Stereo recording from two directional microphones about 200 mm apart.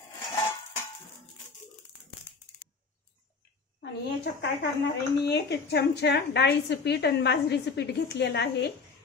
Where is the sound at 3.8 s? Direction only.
55° left (ahead or behind).